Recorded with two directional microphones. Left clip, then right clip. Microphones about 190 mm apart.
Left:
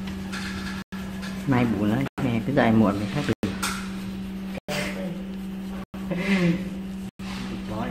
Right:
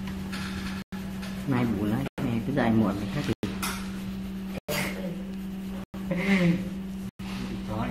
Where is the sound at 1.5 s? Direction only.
25° left (ahead or behind).